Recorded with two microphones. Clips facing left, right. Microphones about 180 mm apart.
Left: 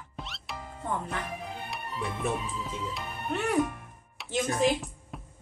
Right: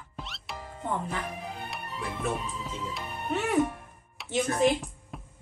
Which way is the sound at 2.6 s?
Centre (ahead or behind).